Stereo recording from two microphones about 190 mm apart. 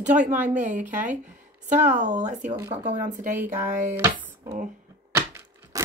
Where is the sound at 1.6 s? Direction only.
40° right (ahead or behind).